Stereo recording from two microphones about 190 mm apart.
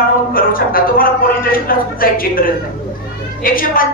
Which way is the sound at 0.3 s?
50° left (ahead or behind).